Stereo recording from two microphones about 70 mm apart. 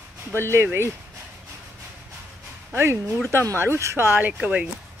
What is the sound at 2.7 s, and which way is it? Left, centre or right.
Speech, right.